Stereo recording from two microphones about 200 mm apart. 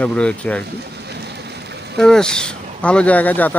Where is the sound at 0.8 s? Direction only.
55° right (ahead or behind).